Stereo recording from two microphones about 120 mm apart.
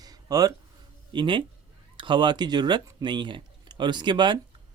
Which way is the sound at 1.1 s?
40° right (ahead or behind).